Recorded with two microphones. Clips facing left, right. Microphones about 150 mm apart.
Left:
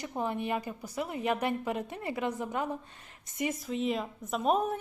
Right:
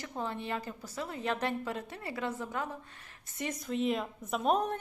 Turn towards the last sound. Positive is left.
turn(degrees=0)  # may be behind; listen again after turning